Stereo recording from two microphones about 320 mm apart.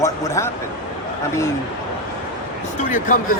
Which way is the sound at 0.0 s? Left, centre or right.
Centre.